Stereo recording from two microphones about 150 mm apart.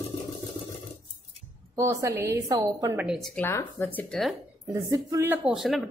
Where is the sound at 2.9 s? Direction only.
5° right (ahead or behind).